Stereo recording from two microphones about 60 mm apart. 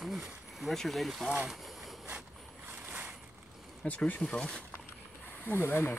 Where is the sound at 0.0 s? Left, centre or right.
Centre.